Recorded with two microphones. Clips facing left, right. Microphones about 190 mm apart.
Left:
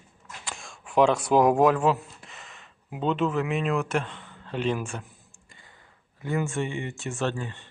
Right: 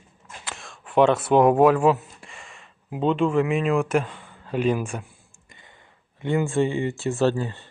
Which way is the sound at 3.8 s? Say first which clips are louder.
Right 5 dB; 10° right (ahead or behind).